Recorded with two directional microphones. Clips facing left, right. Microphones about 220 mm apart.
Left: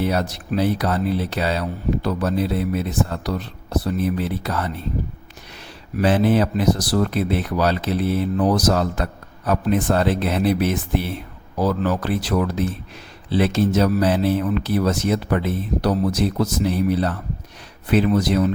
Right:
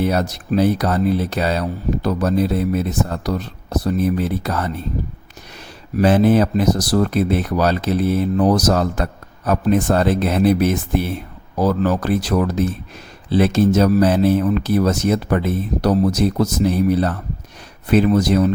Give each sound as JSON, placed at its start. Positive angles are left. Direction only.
{"t": 0.0, "sound": "speech", "side_deg": -45}
{"t": 6.0, "sound": "speech", "side_deg": -45}